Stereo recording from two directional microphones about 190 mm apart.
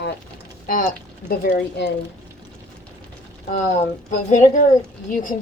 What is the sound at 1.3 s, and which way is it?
Speech, 55° left (ahead or behind).